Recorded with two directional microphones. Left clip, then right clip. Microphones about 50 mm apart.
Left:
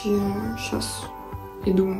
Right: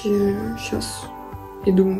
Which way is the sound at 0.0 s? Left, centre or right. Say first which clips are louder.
Right 4 dB; left.